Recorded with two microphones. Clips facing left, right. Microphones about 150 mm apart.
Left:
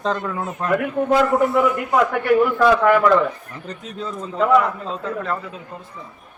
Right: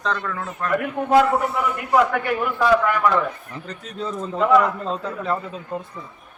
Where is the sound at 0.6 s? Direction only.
20° left (ahead or behind).